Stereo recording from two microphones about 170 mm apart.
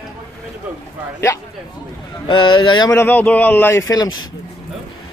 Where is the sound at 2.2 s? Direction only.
30° left (ahead or behind).